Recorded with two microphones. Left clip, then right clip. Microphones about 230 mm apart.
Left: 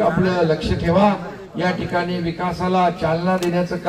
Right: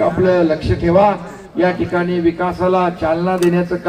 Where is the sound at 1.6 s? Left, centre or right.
Right.